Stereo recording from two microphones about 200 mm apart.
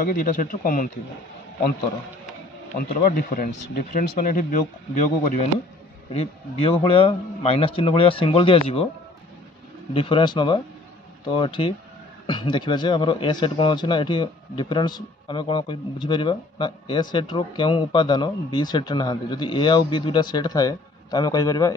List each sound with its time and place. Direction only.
0.0 s speech: 45° left (ahead or behind)
3.0 s speech: 45° left (ahead or behind)
6.1 s speech: 30° left (ahead or behind)
9.9 s speech: 25° left (ahead or behind)